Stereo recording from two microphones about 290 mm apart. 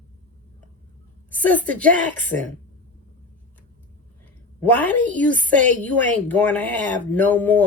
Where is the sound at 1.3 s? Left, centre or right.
Centre.